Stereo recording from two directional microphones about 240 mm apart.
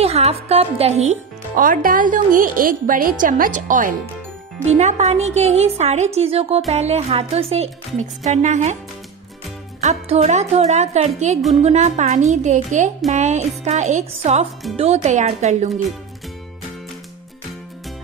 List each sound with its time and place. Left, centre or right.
0.0 s a woman's voice: right
9.8 s a woman's voice: right